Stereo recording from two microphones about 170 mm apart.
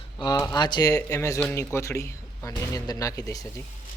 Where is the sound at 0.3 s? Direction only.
20° left (ahead or behind).